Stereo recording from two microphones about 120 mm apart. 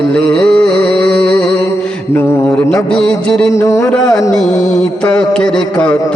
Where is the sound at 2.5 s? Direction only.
15° left (ahead or behind).